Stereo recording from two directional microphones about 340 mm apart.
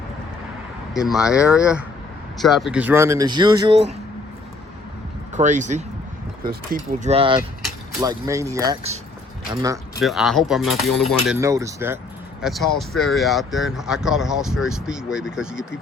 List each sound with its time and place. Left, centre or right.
0.9 s speech: centre
5.3 s speech: right
7.0 s speech: centre